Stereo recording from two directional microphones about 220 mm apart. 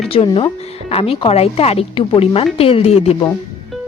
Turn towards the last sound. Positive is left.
turn(degrees=30)  # may be behind; listen again after turning